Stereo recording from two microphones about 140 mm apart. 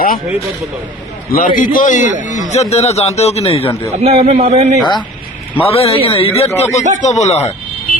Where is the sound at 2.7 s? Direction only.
50° left (ahead or behind).